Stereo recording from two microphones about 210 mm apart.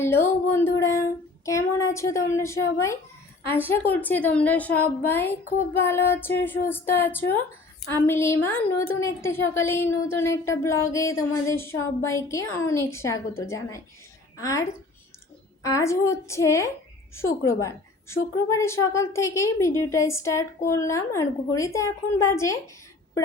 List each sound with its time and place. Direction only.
0.0 s speech: 10° left (ahead or behind)